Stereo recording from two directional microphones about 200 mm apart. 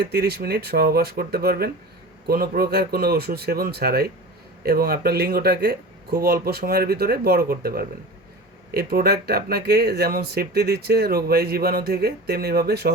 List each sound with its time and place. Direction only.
0.0 s speech: 55° right (ahead or behind)